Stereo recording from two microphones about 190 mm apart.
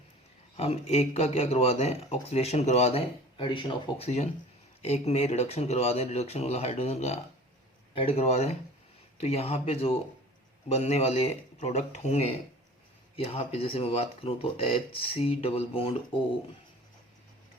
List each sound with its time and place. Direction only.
0.5 s speech: 35° left (ahead or behind)